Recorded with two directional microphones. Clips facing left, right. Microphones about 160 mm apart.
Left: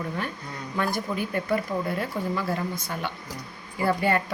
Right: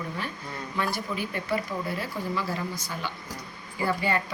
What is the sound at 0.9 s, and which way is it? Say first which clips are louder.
Speech: left 4 dB; 50° left (ahead or behind).